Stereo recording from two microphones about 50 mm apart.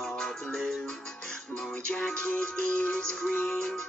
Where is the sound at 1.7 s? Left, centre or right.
Left.